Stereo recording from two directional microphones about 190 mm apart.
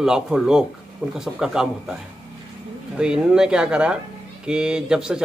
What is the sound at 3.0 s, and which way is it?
A man's voice, 5° right (ahead or behind).